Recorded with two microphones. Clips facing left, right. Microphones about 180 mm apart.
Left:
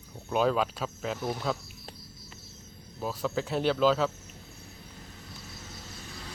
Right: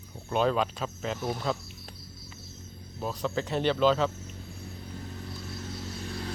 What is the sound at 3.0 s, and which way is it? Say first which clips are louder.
Speech: even; 5° left (ahead or behind).